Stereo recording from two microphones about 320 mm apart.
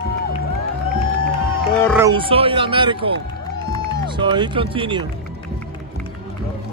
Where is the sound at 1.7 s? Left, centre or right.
Centre.